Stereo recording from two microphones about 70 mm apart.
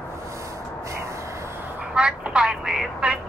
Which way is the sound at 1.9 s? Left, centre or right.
Centre.